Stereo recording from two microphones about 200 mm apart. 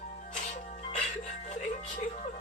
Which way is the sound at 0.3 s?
35° left (ahead or behind).